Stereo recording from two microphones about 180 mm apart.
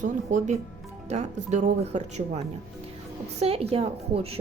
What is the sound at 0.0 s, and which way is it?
Speech, 40° right (ahead or behind).